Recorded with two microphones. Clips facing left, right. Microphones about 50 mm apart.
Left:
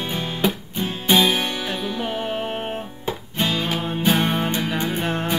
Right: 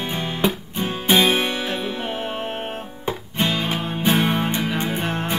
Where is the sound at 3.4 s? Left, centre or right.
Centre.